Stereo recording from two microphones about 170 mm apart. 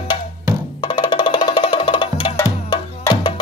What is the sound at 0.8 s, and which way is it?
Music, 25° left (ahead or behind).